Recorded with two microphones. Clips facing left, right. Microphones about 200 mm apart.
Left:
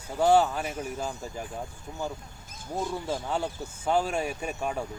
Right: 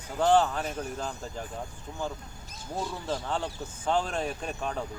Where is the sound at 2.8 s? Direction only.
10° left (ahead or behind).